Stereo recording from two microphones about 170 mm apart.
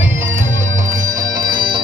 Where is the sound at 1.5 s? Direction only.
30° right (ahead or behind).